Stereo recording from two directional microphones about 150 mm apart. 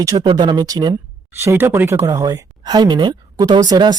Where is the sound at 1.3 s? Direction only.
15° right (ahead or behind).